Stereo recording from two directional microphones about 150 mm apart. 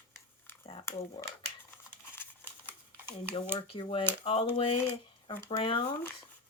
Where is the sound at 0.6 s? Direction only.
40° left (ahead or behind).